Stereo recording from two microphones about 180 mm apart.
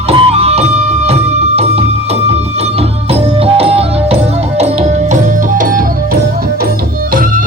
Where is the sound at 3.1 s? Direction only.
35° right (ahead or behind); by 5.8 s 50° right (ahead or behind).